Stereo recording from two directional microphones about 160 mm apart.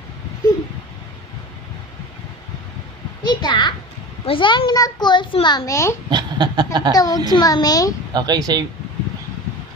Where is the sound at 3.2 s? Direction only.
30° left (ahead or behind).